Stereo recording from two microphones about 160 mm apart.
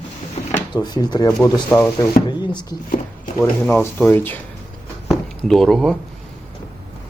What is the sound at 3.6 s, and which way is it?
Speech, 10° left (ahead or behind).